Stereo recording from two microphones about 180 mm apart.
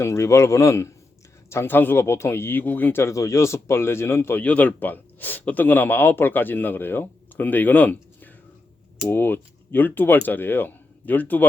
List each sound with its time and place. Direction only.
0.0 s speech: 15° left (ahead or behind)